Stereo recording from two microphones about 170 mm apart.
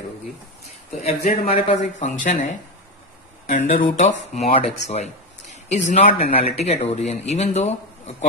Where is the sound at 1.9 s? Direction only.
45° left (ahead or behind).